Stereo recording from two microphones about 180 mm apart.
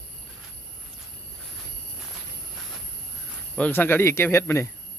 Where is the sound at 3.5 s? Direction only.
10° left (ahead or behind).